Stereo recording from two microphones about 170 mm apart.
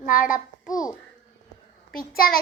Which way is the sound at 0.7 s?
20° left (ahead or behind).